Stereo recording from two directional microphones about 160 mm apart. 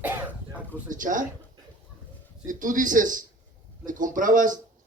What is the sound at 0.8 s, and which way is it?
Speech, 55° right (ahead or behind).